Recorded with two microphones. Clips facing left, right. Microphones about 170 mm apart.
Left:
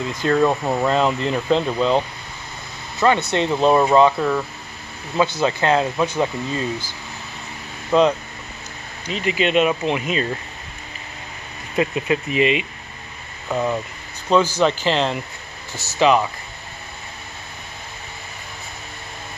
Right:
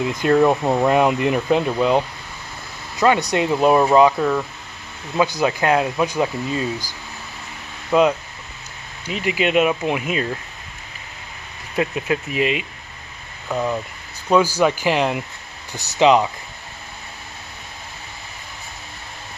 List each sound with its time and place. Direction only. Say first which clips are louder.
0.0 s speech: right 2 dB; 15° right (ahead or behind)
5.1 s speech: even; 15° right (ahead or behind)
7.9 s speech: even; 5° right (ahead or behind)
11.7 s speech: left 1 dB; centre (ahead or behind)
14.3 s speech: right 1 dB; 10° right (ahead or behind)